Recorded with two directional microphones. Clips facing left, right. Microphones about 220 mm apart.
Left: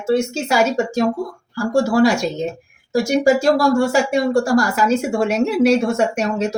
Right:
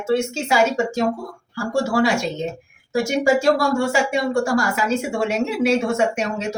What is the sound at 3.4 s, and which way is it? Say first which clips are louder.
Speech: left 3 dB; 35° left (ahead or behind).